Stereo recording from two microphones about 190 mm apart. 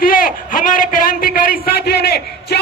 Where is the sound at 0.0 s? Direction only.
50° left (ahead or behind).